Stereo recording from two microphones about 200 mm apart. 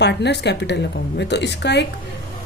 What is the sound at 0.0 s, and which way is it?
Speech, 55° left (ahead or behind).